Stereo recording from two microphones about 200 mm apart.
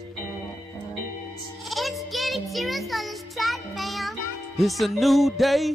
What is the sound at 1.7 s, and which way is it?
Music, centre (ahead or behind).